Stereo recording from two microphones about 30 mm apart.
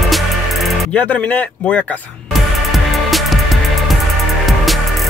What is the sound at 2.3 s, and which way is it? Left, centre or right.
Music, centre.